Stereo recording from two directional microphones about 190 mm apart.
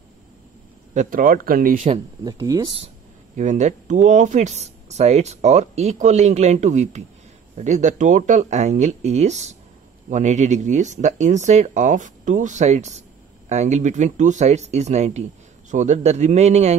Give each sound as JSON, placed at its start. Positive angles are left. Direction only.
{"t": 0.9, "sound": "speech", "side_deg": -45}
{"t": 1.8, "sound": "speech", "side_deg": -25}
{"t": 3.3, "sound": "speech", "side_deg": -40}